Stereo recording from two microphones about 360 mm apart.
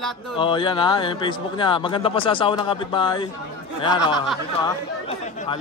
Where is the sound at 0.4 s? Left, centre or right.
Centre.